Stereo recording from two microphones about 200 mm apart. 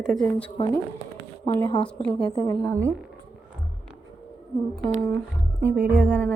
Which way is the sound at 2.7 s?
15° right (ahead or behind).